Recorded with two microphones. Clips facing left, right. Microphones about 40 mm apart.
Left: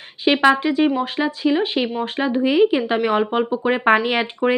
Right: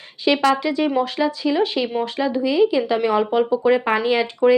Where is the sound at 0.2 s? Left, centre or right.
Left.